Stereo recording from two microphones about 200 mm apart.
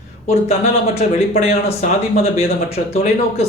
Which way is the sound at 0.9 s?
30° left (ahead or behind).